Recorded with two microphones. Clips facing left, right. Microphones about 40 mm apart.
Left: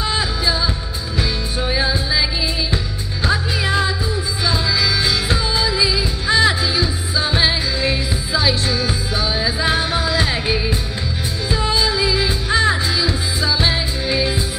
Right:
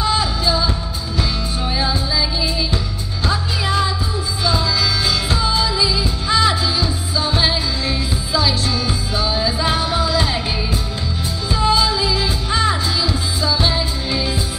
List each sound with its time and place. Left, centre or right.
0.0 s music: centre
3.3 s music: centre